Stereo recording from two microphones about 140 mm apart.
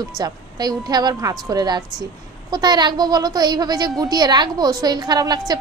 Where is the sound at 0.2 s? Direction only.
30° right (ahead or behind).